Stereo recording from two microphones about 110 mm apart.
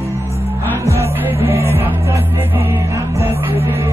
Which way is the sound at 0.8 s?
25° right (ahead or behind).